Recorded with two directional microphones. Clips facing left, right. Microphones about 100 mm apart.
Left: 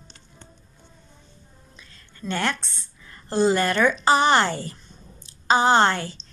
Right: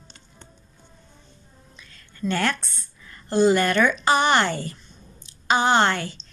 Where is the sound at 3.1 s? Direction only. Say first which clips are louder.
Right 2 dB; 30° left (ahead or behind).